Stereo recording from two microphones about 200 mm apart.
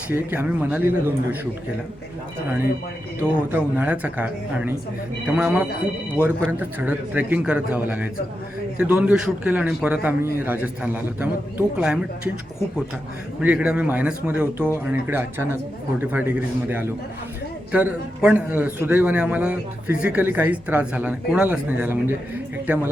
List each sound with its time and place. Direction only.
0.1 s a man's voice: 10° right (ahead or behind)
3.5 s a man's voice: 10° right (ahead or behind)
13.4 s a man's voice: 5° right (ahead or behind)